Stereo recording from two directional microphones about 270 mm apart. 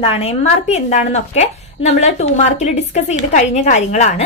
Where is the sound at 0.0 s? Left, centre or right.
Left.